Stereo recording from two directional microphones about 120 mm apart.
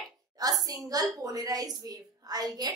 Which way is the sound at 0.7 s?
30° right (ahead or behind).